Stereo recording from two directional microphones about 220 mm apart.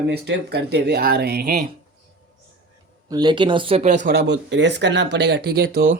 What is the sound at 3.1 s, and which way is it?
Speech, 20° right (ahead or behind).